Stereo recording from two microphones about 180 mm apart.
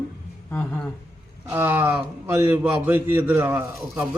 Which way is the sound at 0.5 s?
10° left (ahead or behind).